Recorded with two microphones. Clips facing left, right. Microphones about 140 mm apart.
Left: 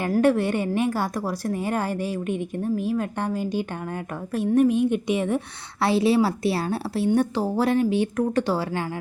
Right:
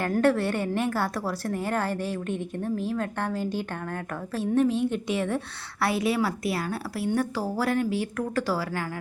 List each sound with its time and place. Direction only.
0.2 s a woman's voice: 15° left (ahead or behind)
5.8 s a woman's voice: 30° left (ahead or behind)